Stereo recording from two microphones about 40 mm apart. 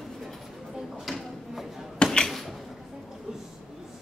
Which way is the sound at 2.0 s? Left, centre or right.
Left.